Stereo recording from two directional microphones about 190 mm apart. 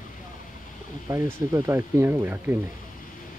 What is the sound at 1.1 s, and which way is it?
Speech, 15° right (ahead or behind).